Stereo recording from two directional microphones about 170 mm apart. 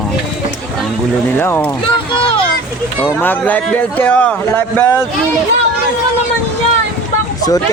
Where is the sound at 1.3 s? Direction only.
10° left (ahead or behind).